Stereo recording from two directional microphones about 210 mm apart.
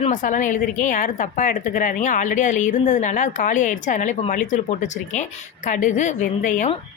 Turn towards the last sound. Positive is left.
turn(degrees=35)  # may be behind; listen again after turning